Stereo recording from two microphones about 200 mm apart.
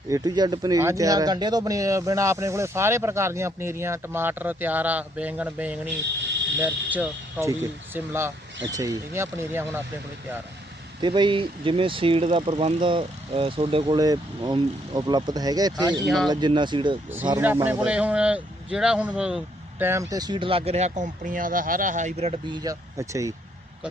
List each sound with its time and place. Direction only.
0.1 s speech: 20° right (ahead or behind)
11.0 s speech: 25° right (ahead or behind)
17.2 s speech: 10° right (ahead or behind)